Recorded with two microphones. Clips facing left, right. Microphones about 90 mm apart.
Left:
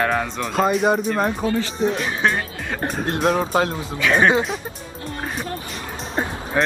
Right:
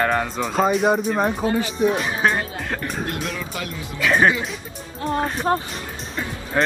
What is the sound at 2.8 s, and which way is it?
Speech, 40° left (ahead or behind).